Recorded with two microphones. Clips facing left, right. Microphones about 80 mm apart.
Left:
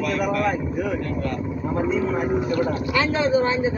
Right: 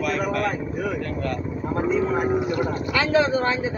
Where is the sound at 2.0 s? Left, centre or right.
Right.